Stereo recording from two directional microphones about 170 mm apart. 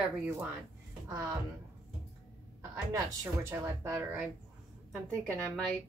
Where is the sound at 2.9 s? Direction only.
15° right (ahead or behind).